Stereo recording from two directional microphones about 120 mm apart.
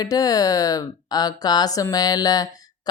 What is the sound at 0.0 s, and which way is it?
A woman's voice, 30° left (ahead or behind).